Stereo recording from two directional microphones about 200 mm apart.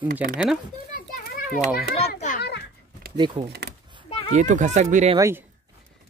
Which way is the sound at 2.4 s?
55° left (ahead or behind).